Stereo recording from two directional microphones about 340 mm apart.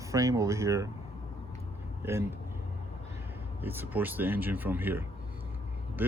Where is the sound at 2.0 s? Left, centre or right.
Centre.